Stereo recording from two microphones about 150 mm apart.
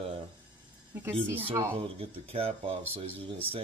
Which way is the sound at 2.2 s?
40° right (ahead or behind).